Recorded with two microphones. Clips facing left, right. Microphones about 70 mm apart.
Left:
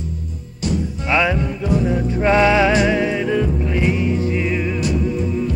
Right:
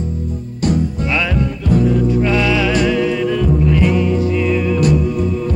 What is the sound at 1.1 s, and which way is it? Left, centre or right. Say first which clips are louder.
Music: left 4 dB; left.